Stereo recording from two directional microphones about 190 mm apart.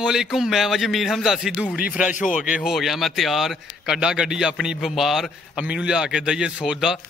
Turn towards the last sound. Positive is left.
turn(degrees=-5)  # may be behind; listen again after turning